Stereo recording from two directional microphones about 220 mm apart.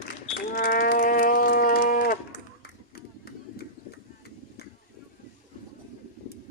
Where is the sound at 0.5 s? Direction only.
45° left (ahead or behind).